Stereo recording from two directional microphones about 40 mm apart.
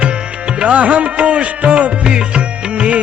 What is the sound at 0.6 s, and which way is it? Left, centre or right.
Music, right.